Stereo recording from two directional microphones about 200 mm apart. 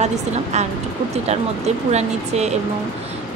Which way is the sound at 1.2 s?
35° right (ahead or behind).